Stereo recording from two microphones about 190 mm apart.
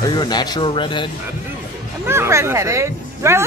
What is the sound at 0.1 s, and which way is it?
Speech, 20° left (ahead or behind).